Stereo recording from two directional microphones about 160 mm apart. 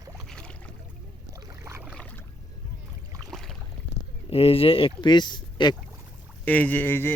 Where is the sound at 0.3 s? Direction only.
5° left (ahead or behind).